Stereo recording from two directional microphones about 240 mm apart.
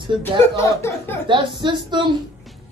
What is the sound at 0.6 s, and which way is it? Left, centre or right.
Speech, centre.